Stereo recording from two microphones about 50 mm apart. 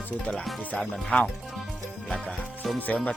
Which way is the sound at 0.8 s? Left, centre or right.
Centre.